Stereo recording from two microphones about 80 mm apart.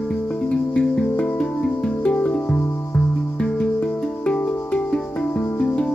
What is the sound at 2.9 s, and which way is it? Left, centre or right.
Music, centre.